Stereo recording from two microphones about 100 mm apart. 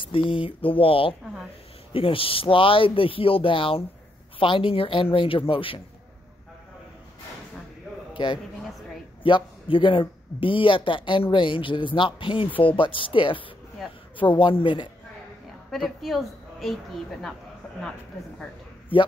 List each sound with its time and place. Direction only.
0.0 s a man's voice: 60° left (ahead or behind)
8.1 s a sound: 50° left (ahead or behind)
9.2 s a man's voice: 60° left (ahead or behind)
15.7 s a woman's voice: centre (ahead or behind)